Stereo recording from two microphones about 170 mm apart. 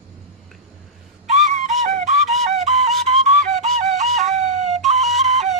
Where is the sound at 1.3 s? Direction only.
45° right (ahead or behind).